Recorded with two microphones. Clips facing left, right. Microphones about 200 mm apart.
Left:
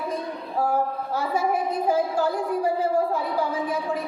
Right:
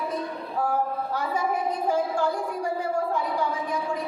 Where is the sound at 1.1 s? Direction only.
10° left (ahead or behind).